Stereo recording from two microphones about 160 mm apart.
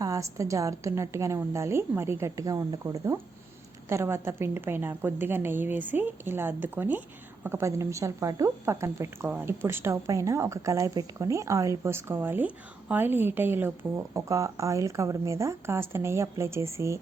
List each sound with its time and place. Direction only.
0.0 s a woman's voice: 20° right (ahead or behind)